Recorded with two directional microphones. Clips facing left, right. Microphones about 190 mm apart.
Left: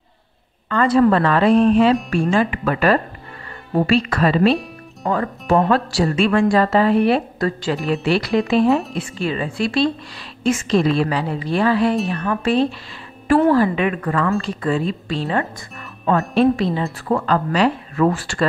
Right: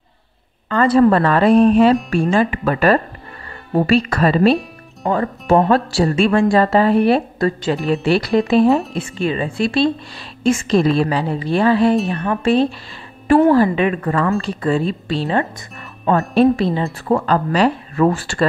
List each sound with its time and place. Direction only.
0.7 s speech: 35° right (ahead or behind)
1.6 s music: 45° right (ahead or behind)
2.3 s speech: 35° right (ahead or behind)
5.0 s a woman's voice: 25° right (ahead or behind)
7.3 s a woman's voice: 25° right (ahead or behind)
9.2 s a woman's voice: 25° right (ahead or behind)
10.4 s a woman's voice: 35° right (ahead or behind)